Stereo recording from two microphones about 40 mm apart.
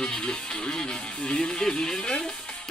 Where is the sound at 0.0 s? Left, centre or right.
Centre.